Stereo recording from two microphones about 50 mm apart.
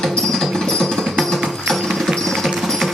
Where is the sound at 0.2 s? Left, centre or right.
Centre.